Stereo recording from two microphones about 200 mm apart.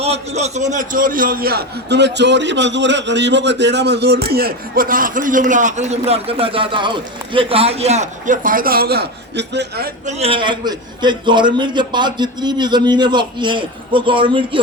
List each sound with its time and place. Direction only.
0.0 s a man's voice: 30° right (ahead or behind); by 9.9 s 55° right (ahead or behind)
10.1 s a man's voice: 30° right (ahead or behind)